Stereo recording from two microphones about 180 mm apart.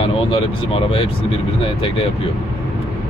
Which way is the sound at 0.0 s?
30° left (ahead or behind).